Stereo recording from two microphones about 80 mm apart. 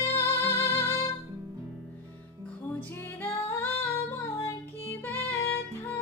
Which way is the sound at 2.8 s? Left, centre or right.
Left.